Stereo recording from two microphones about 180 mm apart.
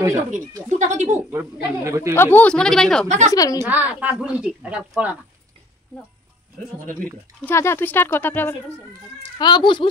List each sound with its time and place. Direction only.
0.7 s speech: 45° right (ahead or behind)
1.1 s speech: 15° right (ahead or behind)
2.1 s speech: 10° left (ahead or behind)
3.3 s a child's voice: 20° left (ahead or behind)
3.6 s speech: 10° right (ahead or behind)
7.4 s speech: 15° left (ahead or behind)
9.4 s a child's voice: 25° left (ahead or behind)